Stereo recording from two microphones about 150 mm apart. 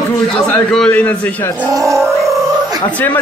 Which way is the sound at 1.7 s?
20° right (ahead or behind).